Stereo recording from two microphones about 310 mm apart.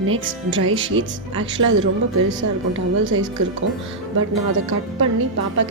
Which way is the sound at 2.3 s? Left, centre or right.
Right.